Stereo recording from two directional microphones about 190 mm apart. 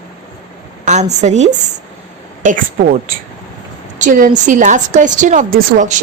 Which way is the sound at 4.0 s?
45° right (ahead or behind).